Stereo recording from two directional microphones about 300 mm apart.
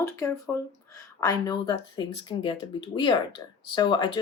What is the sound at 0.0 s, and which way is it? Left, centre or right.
Speech, centre.